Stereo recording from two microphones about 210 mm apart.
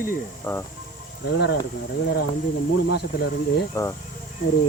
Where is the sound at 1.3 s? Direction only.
55° left (ahead or behind).